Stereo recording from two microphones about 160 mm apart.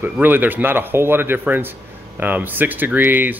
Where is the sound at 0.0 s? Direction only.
10° right (ahead or behind).